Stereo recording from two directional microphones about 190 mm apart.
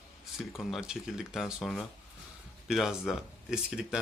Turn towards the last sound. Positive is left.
turn(degrees=-5)  # may be behind; listen again after turning